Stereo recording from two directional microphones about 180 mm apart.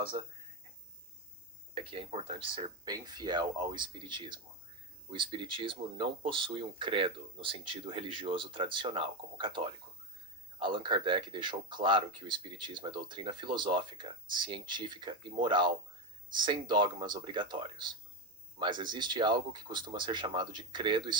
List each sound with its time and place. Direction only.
0.1 s speech: 30° right (ahead or behind)
1.7 s speech: 30° right (ahead or behind)